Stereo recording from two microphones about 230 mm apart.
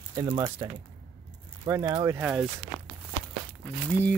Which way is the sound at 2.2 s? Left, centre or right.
Centre.